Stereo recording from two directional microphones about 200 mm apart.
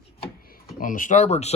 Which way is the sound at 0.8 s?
40° left (ahead or behind).